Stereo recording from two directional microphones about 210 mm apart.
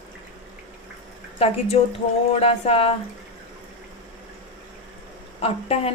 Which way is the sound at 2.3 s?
30° left (ahead or behind).